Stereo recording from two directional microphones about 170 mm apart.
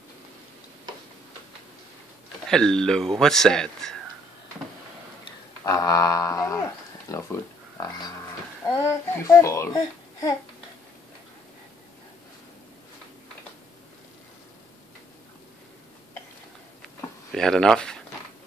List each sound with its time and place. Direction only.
2.5 s a man's voice: 5° left (ahead or behind)
5.7 s a sound: 20° left (ahead or behind)
8.6 s a child's voice: 15° left (ahead or behind)
17.3 s a man's voice: 5° left (ahead or behind)